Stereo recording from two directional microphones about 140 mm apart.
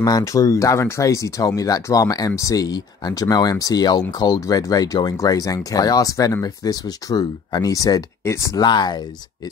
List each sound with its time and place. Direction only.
0.0 s speech: 25° left (ahead or behind)